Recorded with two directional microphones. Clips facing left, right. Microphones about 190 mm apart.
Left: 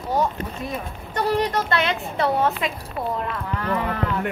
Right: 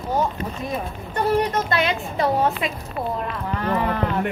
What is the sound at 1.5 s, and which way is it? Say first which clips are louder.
A woman's voice: right 1 dB; 15° right (ahead or behind).